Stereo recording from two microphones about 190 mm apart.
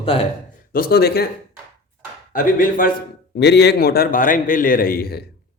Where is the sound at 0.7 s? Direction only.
50° left (ahead or behind).